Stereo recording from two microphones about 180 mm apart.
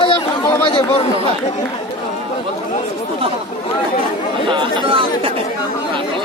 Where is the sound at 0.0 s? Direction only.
25° left (ahead or behind).